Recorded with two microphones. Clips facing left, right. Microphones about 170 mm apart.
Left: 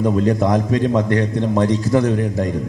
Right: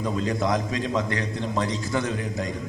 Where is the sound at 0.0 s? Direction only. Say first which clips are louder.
Left 9 dB; 50° left (ahead or behind).